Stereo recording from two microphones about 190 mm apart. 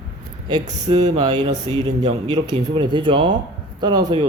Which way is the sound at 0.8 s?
20° right (ahead or behind).